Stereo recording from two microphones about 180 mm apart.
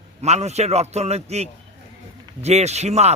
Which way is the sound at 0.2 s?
35° right (ahead or behind).